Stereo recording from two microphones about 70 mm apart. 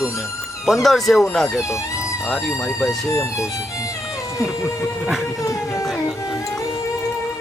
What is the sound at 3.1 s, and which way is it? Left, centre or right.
Speech, left.